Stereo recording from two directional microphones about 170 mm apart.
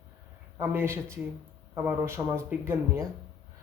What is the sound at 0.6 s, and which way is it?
A man's voice, 15° right (ahead or behind).